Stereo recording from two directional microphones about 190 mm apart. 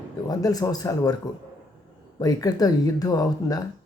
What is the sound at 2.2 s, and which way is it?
Speech, 20° left (ahead or behind).